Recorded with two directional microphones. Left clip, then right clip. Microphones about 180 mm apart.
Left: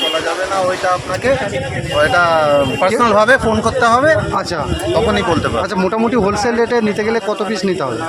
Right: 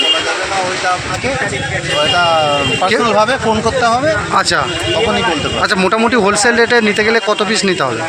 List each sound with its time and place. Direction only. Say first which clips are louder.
2.0 s speech: even; 30° left (ahead or behind)
5.7 s speech: right 6 dB; 5° left (ahead or behind)